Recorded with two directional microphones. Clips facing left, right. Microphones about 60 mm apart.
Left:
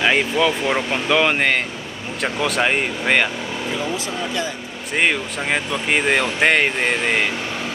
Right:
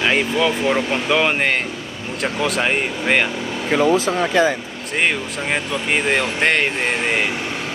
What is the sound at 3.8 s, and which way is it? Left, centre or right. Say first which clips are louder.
Speech: right 8 dB; right.